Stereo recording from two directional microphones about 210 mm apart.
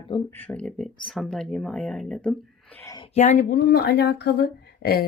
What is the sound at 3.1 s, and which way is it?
Speech, 35° left (ahead or behind).